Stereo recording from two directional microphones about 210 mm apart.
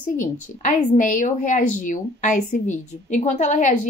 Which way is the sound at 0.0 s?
35° left (ahead or behind).